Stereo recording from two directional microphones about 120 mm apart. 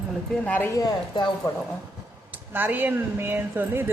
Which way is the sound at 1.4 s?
30° left (ahead or behind).